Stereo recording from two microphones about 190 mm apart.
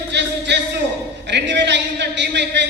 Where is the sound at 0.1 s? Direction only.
65° right (ahead or behind).